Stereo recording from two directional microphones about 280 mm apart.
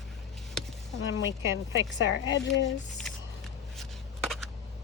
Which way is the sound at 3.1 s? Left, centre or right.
Centre.